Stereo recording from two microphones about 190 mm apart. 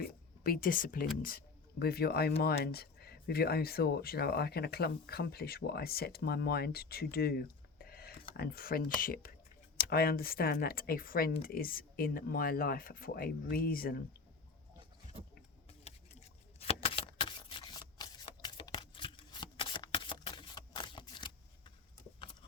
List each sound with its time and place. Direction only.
0.4 s speech: 50° left (ahead or behind)
16.6 s shuffling cards: 30° left (ahead or behind)